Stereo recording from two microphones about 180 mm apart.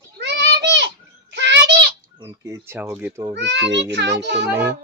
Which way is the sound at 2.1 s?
20° right (ahead or behind).